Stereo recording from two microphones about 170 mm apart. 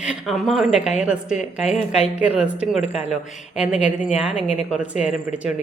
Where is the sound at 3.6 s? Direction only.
45° left (ahead or behind).